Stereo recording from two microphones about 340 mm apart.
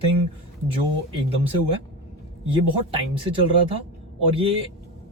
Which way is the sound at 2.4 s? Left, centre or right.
Centre.